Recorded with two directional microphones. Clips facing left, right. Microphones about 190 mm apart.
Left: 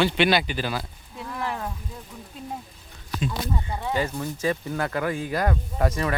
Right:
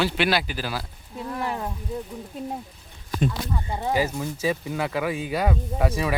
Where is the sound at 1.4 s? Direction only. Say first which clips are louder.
Even; 15° right (ahead or behind).